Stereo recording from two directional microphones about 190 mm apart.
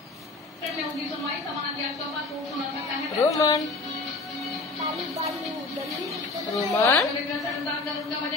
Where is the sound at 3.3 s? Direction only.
15° left (ahead or behind).